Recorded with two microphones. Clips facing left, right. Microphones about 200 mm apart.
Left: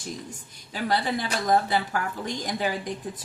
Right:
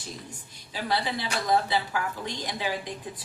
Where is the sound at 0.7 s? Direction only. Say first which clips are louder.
Left 3 dB; 50° left (ahead or behind).